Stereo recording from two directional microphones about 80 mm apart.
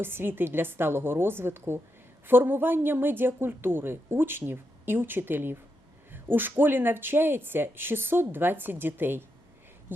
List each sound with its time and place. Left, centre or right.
0.0 s a woman's voice: right